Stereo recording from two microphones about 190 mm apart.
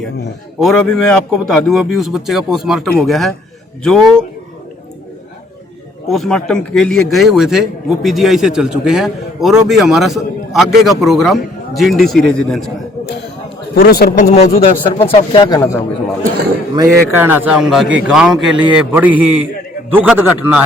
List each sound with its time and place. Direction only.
0.6 s a man's voice: 5° left (ahead or behind)
6.1 s a man's voice: centre (ahead or behind)
13.7 s a man's voice: 55° left (ahead or behind)
14.3 s speech: 40° left (ahead or behind)
15.1 s speech: 25° left (ahead or behind)
16.7 s a man's voice: 15° right (ahead or behind)